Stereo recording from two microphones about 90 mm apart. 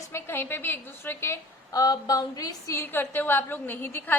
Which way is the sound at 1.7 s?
45° left (ahead or behind).